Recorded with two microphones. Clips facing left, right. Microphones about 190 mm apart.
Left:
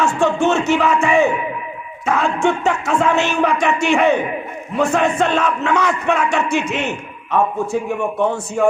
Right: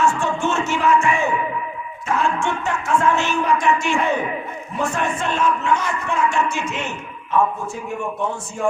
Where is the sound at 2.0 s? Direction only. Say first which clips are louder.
Left 3 dB; 90° left.